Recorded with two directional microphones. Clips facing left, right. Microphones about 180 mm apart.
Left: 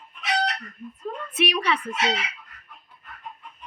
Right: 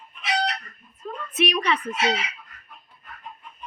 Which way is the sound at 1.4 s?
10° left (ahead or behind).